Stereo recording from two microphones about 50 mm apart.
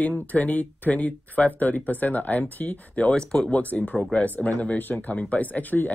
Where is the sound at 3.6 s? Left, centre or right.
Left.